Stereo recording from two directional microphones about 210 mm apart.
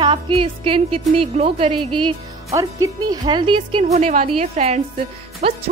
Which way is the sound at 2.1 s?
15° right (ahead or behind).